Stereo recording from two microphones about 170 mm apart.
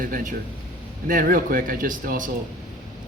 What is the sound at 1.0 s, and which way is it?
Speech, 55° right (ahead or behind).